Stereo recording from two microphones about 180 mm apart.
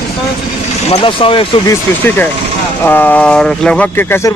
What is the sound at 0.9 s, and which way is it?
Speech, 30° left (ahead or behind).